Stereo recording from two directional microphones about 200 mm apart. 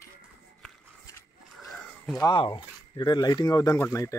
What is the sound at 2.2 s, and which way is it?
Speech, 25° left (ahead or behind).